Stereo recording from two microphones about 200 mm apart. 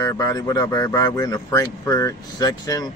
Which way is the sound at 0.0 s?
20° left (ahead or behind).